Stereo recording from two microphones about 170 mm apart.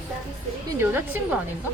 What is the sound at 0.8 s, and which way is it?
Speech, 10° right (ahead or behind).